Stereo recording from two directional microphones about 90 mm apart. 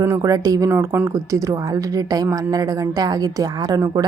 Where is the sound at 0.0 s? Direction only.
35° right (ahead or behind).